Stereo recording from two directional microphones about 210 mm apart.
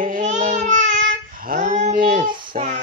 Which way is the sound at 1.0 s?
40° right (ahead or behind).